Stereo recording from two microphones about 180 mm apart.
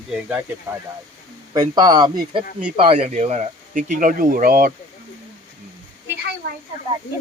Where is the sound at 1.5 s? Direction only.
20° right (ahead or behind); by 4.7 s 55° right (ahead or behind).